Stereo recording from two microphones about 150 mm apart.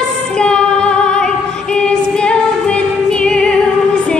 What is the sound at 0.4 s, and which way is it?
Female singing, 5° left (ahead or behind).